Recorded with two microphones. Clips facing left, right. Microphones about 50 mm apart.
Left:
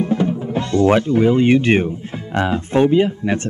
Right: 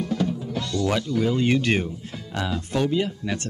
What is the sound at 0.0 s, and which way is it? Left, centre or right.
Speech, left.